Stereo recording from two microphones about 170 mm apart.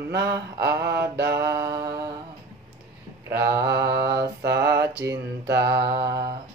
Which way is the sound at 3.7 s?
75° right (ahead or behind).